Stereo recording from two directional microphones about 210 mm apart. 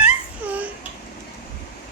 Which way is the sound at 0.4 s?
10° right (ahead or behind).